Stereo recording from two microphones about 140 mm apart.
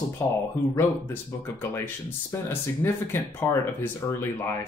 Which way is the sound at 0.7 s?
15° left (ahead or behind).